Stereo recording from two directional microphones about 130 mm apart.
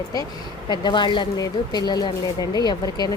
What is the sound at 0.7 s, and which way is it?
Speech, 35° left (ahead or behind).